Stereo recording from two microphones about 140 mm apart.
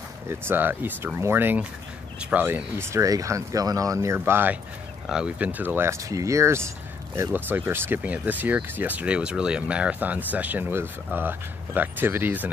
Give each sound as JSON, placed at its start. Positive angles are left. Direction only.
{"t": 0.3, "sound": "speech", "side_deg": -15}